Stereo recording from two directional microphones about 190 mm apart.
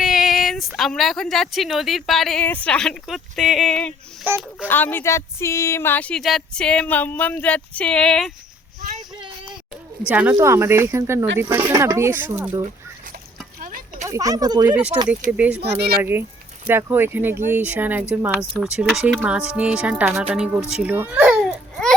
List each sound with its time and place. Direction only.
0.0 s speech: centre (ahead or behind)
10.1 s speech: 10° right (ahead or behind)
13.6 s a sound: 45° right (ahead or behind)
14.0 s speech: 15° right (ahead or behind)
15.3 s speech: 10° right (ahead or behind)
15.8 s a child's voice: 55° right (ahead or behind)
16.6 s speech: 10° right (ahead or behind)
18.5 s a child's voice: centre (ahead or behind)